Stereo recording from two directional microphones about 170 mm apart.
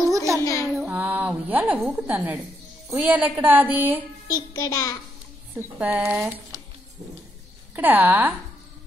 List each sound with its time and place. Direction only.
0.1 s a sound: 20° right (ahead or behind)
0.4 s a sound: 20° left (ahead or behind)
0.7 s a woman's voice: 10° right (ahead or behind)
4.6 s a child's voice: 20° left (ahead or behind)
5.5 s a woman's voice: 10° right (ahead or behind)
7.7 s a woman's voice: 10° right (ahead or behind)